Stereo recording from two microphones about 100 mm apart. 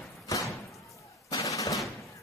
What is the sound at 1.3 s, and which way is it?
Machine gun, 35° left (ahead or behind).